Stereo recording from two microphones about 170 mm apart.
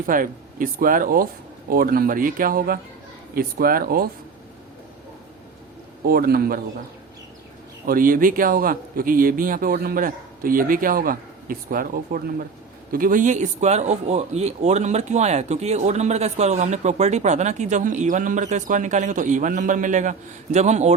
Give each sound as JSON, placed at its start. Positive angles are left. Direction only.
{"t": 0.0, "sound": "speech", "side_deg": -55}
{"t": 6.1, "sound": "speech", "side_deg": -60}
{"t": 7.9, "sound": "speech", "side_deg": -55}